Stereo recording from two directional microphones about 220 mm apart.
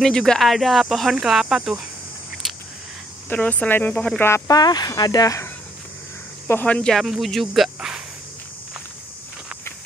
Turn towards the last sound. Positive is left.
turn(degrees=0)  # may be behind; listen again after turning